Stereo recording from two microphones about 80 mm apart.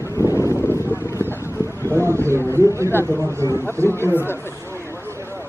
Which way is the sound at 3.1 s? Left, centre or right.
Right.